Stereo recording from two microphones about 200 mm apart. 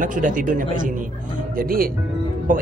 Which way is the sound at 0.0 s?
40° right (ahead or behind).